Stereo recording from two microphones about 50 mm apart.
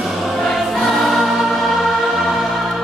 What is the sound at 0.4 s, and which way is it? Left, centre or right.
Music, centre.